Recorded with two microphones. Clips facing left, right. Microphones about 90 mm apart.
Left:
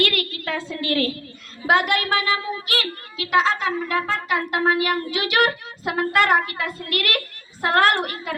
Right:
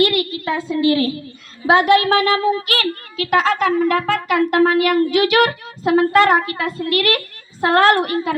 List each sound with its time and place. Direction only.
0.0 s a woman's voice: 20° right (ahead or behind)
0.8 s a woman's voice: 50° left (ahead or behind)
1.6 s speech: 35° right (ahead or behind)
3.6 s a woman's voice: 65° right (ahead or behind); by 8.4 s 40° right (ahead or behind)